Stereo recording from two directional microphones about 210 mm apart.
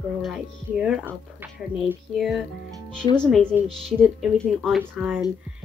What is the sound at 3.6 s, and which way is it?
Speech, 25° right (ahead or behind).